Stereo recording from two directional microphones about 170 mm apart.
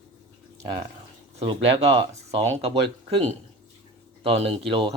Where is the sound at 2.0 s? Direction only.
35° right (ahead or behind).